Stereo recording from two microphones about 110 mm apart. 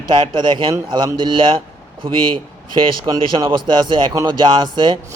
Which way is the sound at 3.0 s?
35° right (ahead or behind).